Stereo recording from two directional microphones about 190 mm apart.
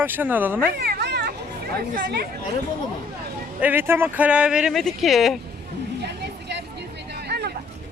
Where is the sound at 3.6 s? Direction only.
10° right (ahead or behind).